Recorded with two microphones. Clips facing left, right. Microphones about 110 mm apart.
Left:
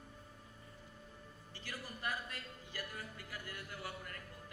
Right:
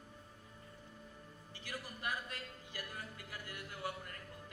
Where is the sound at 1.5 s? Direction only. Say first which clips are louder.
Right 1 dB; 15° right (ahead or behind).